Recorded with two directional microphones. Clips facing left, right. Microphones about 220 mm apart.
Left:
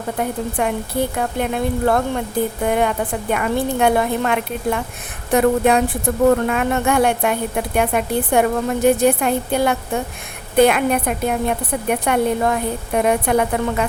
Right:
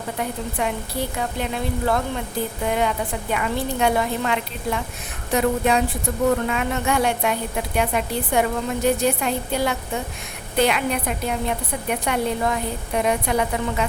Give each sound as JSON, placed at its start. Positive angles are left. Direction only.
{"t": 0.2, "sound": "a woman's voice", "side_deg": 50}